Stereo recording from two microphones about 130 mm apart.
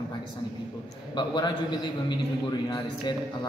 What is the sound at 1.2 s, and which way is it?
Speech, 35° left (ahead or behind).